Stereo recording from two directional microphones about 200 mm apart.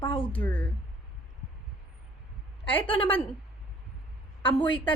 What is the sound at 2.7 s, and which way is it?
Speech, 25° left (ahead or behind).